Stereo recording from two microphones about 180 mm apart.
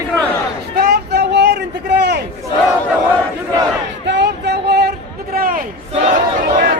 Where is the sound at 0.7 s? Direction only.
60° right (ahead or behind).